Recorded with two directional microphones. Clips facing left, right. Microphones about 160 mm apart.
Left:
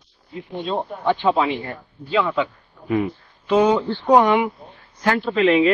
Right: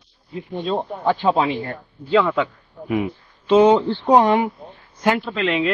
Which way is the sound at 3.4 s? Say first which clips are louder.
Right 3 dB; 25° right (ahead or behind).